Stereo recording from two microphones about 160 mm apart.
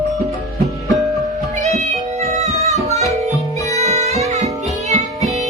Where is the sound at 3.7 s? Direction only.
40° right (ahead or behind).